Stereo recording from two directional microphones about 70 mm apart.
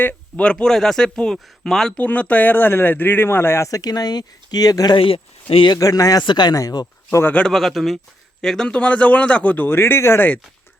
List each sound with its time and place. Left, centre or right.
0.0 s a sound: left
0.5 s speech: centre
2.0 s a man's voice: centre; by 3.7 s left
3.7 s speech: left
6.6 s speech: left
7.3 s a man's voice: centre; by 10.2 s left